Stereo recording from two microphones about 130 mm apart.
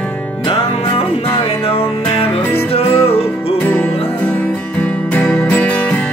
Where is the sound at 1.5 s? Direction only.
50° left (ahead or behind).